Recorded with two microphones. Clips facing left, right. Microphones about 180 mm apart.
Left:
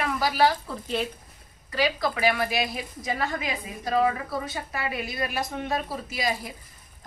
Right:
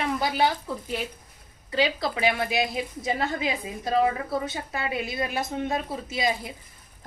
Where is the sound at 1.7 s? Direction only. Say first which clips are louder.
Even; 25° right (ahead or behind).